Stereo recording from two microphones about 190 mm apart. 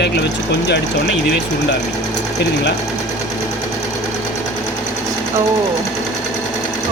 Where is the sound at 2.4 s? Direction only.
65° left (ahead or behind).